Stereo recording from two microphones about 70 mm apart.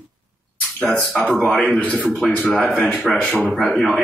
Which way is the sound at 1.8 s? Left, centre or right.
Left.